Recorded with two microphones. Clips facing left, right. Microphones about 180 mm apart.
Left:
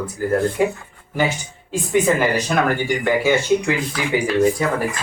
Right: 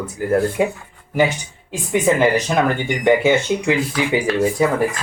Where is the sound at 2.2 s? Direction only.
20° right (ahead or behind).